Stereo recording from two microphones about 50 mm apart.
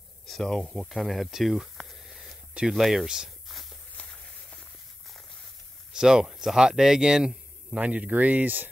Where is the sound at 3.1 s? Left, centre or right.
Centre.